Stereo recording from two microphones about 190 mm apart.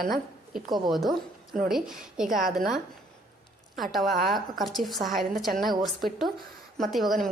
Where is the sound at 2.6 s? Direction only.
Centre (ahead or behind).